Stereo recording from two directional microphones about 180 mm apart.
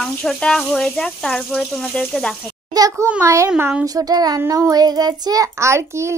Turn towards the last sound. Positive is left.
turn(degrees=-15)  # may be behind; listen again after turning